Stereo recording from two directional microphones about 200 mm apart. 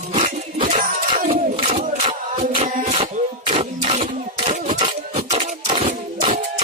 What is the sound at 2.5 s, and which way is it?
Music, 25° right (ahead or behind).